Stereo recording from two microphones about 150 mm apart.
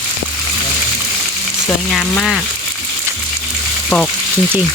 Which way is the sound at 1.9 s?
Centre (ahead or behind).